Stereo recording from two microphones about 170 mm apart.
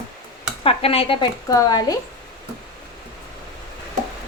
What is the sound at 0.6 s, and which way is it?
Speech, 35° left (ahead or behind).